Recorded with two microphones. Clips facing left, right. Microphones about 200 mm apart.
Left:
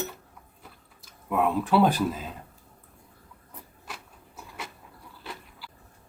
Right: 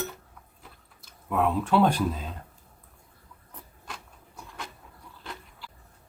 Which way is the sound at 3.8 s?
5° left (ahead or behind).